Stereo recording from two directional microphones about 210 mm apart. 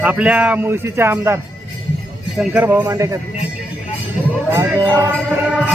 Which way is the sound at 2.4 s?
10° right (ahead or behind).